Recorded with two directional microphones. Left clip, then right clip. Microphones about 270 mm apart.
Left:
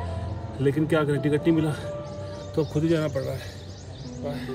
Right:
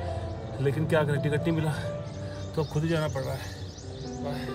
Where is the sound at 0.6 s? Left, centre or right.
Centre.